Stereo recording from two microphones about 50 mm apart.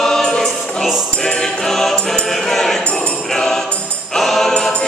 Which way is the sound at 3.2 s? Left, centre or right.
Centre.